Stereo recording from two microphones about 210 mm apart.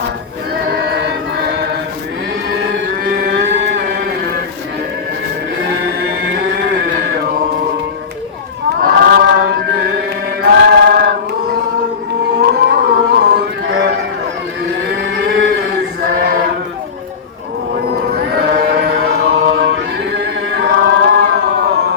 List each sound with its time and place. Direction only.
0.7 s choir: 50° right (ahead or behind)
3.1 s music: 50° right (ahead or behind)
5.7 s a sound: 60° right (ahead or behind)
8.8 s chant: 45° right (ahead or behind)
10.4 s choir: 50° right (ahead or behind)
12.4 s music: 50° right (ahead or behind)
14.9 s cattle: 55° right (ahead or behind)
16.0 s chant: 45° right (ahead or behind)
18.1 s chant: 50° right (ahead or behind)